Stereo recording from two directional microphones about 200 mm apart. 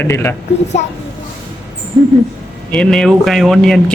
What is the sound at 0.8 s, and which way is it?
Speech, 35° left (ahead or behind).